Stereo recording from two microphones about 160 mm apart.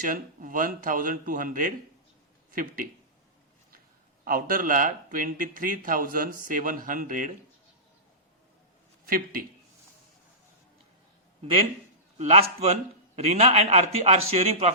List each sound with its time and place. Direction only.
0.0 s speech: 55° right (ahead or behind)
4.2 s speech: 65° right (ahead or behind)
9.0 s speech: 65° right (ahead or behind)
12.2 s a man's voice: 40° right (ahead or behind)